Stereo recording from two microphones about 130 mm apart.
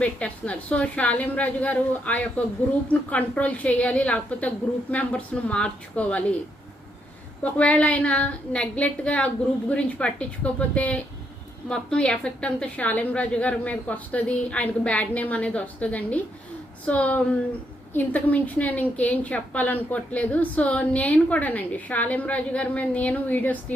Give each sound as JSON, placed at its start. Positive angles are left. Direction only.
{"t": 0.0, "sound": "a woman's voice", "side_deg": 10}
{"t": 7.4, "sound": "a woman's voice", "side_deg": 10}